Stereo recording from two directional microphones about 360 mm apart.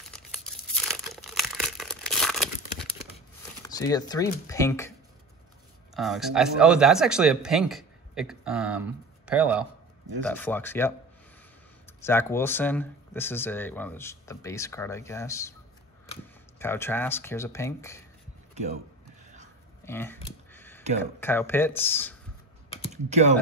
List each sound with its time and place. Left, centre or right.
0.1 s tearing: centre
3.6 s speech: centre
5.9 s speech: centre
12.0 s speech: centre
18.5 s a sound: centre
19.8 s a sound: centre
21.0 s speech: centre
23.0 s speech: centre